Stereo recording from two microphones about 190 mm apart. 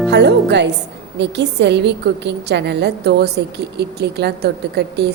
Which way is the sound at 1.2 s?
65° right (ahead or behind).